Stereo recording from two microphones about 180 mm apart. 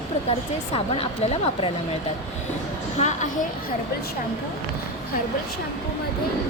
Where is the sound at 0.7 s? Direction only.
35° left (ahead or behind).